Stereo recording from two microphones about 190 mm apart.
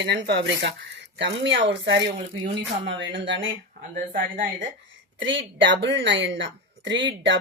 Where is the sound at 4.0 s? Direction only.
50° right (ahead or behind).